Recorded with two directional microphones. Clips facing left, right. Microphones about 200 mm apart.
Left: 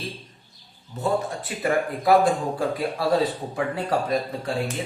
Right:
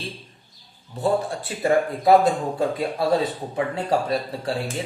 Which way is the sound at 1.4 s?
25° right (ahead or behind).